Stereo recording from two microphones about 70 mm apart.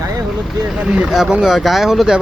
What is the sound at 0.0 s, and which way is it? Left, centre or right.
Vehicle, right.